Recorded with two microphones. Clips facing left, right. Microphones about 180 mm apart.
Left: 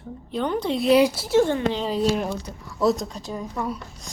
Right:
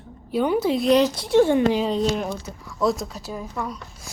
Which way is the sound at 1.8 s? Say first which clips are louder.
Even; 5° left (ahead or behind).